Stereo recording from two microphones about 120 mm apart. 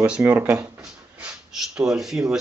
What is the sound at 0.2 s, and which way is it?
Speech, 15° right (ahead or behind).